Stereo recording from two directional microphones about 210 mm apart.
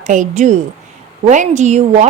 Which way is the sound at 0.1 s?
35° right (ahead or behind).